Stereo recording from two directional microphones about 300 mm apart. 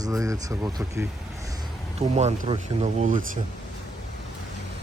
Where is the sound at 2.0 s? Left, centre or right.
Right.